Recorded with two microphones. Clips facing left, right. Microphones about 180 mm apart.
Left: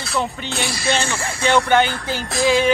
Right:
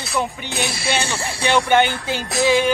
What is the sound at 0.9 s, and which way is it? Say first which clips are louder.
Speech: left 3 dB; 10° right (ahead or behind).